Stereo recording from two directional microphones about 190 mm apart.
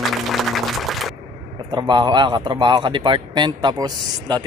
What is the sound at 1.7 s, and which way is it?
Speech, 25° right (ahead or behind).